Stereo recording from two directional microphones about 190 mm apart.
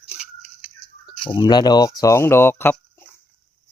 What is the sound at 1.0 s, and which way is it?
Speech, 25° left (ahead or behind).